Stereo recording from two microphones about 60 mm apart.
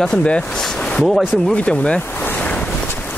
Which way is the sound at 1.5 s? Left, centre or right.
Left.